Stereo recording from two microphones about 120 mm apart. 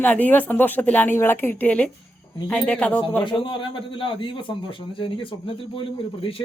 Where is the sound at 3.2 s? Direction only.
45° left (ahead or behind).